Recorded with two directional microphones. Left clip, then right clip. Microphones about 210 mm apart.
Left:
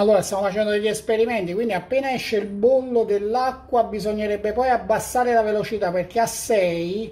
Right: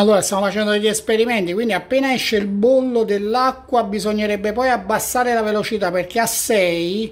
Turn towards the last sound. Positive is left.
turn(degrees=-30)  # may be behind; listen again after turning